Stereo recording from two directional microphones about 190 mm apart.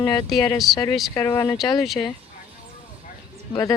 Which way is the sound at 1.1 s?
15° left (ahead or behind).